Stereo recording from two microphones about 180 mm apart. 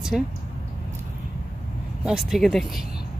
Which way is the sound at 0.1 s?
Centre (ahead or behind).